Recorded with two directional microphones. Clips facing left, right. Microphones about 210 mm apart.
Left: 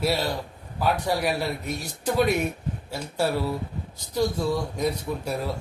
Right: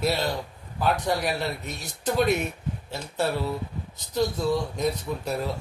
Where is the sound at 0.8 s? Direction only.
5° left (ahead or behind).